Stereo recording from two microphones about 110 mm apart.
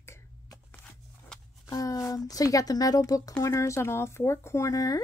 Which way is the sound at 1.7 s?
30° left (ahead or behind).